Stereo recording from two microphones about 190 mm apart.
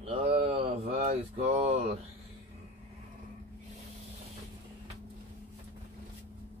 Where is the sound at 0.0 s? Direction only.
30° right (ahead or behind).